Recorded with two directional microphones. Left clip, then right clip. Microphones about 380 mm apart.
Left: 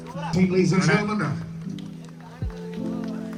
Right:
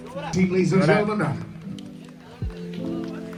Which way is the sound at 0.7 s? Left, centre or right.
Centre.